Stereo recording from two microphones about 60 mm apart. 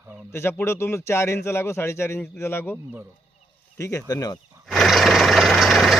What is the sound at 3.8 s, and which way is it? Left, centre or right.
Speech, left.